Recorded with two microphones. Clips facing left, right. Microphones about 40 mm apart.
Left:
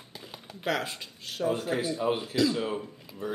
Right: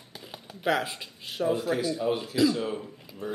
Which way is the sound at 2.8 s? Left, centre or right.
Centre.